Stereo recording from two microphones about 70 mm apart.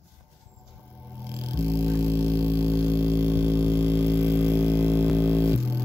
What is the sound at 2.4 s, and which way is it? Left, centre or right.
Vehicle, right.